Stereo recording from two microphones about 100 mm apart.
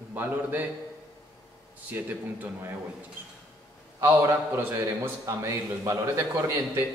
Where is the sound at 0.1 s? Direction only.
20° right (ahead or behind).